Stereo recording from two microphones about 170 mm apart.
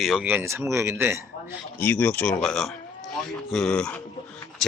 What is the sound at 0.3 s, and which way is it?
Speech, 15° right (ahead or behind).